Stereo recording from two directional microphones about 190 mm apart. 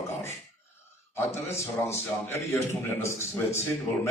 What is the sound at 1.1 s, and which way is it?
A man's voice, 15° left (ahead or behind).